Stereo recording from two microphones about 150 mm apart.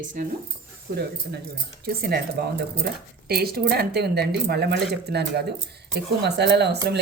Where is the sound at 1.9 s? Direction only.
90° right.